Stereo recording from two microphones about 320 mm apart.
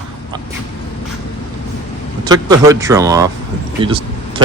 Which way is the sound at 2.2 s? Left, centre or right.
Centre.